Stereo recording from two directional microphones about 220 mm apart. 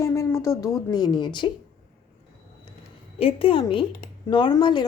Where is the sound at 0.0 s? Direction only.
15° left (ahead or behind).